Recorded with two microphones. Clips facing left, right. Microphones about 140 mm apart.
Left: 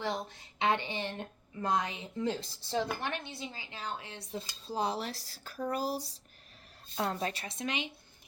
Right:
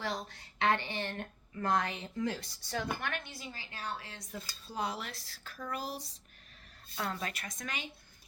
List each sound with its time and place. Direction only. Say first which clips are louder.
0.0 s speech: left 3 dB; 20° left (ahead or behind)